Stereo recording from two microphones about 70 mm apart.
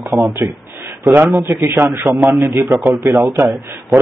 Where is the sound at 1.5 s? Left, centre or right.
Right.